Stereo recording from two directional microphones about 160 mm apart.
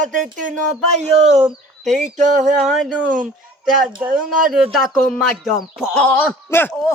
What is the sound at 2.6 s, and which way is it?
Speech, centre (ahead or behind).